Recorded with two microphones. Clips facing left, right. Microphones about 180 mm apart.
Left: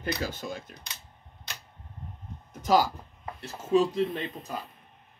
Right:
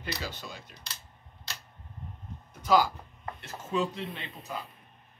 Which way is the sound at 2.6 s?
45° left (ahead or behind).